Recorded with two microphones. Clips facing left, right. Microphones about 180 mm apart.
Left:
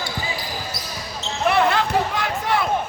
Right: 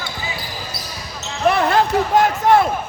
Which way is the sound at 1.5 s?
40° right (ahead or behind).